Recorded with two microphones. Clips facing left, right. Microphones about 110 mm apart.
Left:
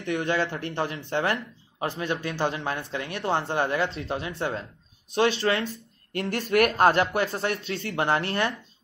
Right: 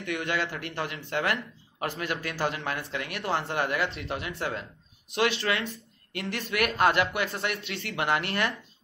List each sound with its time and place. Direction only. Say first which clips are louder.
0.0 s speech: left 4 dB; 30° left (ahead or behind)